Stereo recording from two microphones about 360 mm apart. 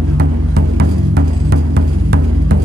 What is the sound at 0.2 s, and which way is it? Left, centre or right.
Music, right.